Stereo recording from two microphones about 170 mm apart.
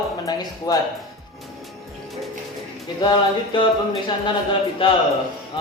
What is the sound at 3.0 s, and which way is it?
Speech, 25° left (ahead or behind).